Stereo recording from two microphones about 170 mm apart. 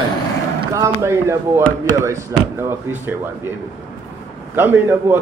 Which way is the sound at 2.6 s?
10° right (ahead or behind).